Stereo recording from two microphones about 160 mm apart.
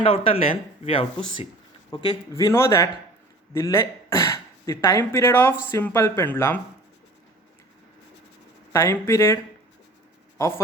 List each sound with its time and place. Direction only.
0.0 s speech: 35° left (ahead or behind); by 6.6 s 10° left (ahead or behind)
8.7 s speech: 15° left (ahead or behind)